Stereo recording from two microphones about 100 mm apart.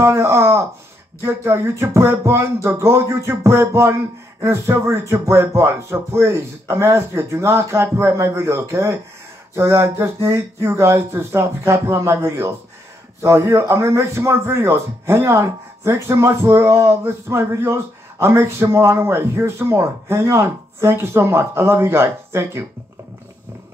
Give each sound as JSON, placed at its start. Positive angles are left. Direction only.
{"t": 0.0, "sound": "speech", "side_deg": -25}